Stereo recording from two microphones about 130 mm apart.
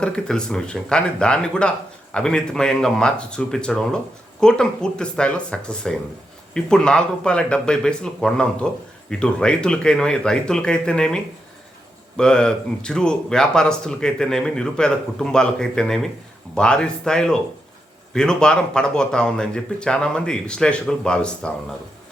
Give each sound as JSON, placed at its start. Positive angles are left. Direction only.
{"t": 0.0, "sound": "speech", "side_deg": 5}